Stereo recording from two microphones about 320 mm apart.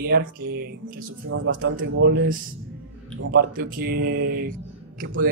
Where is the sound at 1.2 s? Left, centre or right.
Right.